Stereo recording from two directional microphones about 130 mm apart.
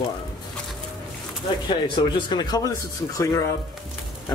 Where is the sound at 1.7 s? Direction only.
35° left (ahead or behind).